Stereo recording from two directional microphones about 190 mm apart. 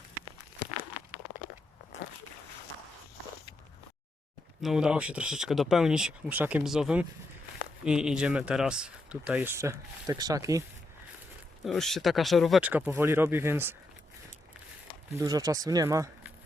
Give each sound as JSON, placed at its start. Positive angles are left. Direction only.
{"t": 4.6, "sound": "speech", "side_deg": -5}
{"t": 11.6, "sound": "speech", "side_deg": 0}
{"t": 15.1, "sound": "speech", "side_deg": -20}